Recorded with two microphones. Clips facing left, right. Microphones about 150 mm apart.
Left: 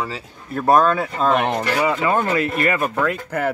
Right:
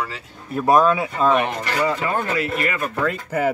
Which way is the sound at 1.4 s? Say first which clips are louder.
Left 3 dB; 65° left (ahead or behind).